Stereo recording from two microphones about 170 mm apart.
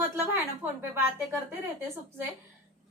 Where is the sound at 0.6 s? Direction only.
15° right (ahead or behind).